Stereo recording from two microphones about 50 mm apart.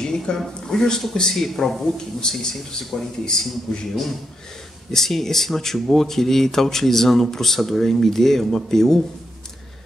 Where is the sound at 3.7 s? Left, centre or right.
Centre.